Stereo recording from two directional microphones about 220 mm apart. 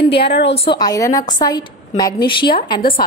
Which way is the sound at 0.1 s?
50° left (ahead or behind).